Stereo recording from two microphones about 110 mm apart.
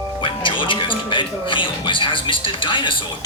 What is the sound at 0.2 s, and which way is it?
Speech, 50° left (ahead or behind).